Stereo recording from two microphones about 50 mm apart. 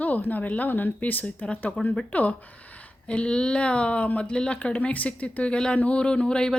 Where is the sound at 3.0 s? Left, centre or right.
Centre.